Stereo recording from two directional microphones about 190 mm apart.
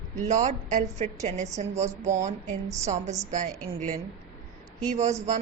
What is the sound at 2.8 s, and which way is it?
A woman's voice, 35° right (ahead or behind).